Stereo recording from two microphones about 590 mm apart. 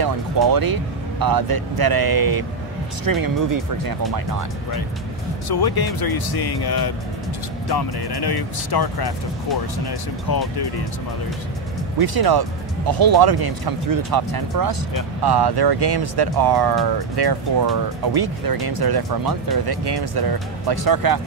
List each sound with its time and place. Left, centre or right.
0.0 s speech: right
5.5 s speech: left
12.0 s speech: right